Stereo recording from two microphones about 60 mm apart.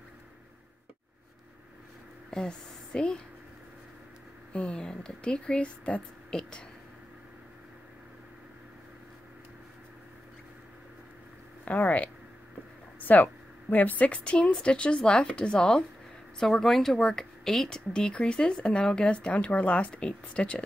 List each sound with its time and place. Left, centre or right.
2.3 s a woman's voice: centre
4.5 s speech: centre
11.6 s speech: left